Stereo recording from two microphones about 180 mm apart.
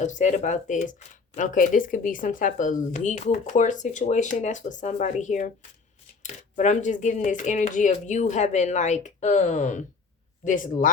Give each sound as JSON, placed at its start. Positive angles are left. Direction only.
{"t": 0.0, "sound": "speech", "side_deg": 40}